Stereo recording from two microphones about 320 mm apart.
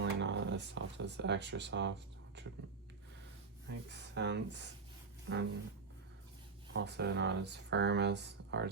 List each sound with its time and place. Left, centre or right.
0.0 s a sound: right
2.4 s speech: right
3.8 s speech: right
6.7 s speech: right